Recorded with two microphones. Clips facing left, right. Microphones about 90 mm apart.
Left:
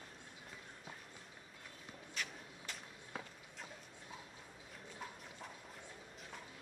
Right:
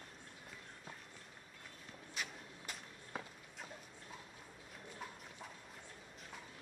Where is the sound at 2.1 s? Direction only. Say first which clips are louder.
Even; 10° right (ahead or behind).